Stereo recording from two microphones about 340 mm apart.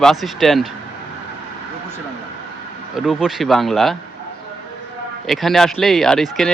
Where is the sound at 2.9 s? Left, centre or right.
Centre.